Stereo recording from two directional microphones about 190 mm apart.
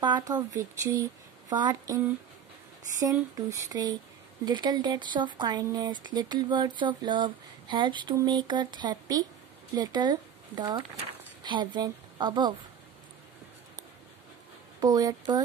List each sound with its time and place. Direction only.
0.0 s speech: 20° right (ahead or behind)
3.0 s a woman's voice: 20° right (ahead or behind)
14.8 s speech: 20° right (ahead or behind)